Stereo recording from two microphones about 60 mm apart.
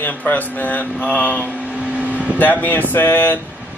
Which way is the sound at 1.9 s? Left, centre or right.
Right.